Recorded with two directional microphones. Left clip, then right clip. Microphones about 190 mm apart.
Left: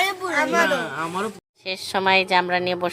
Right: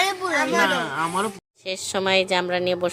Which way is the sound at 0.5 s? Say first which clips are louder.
Even; 50° right (ahead or behind).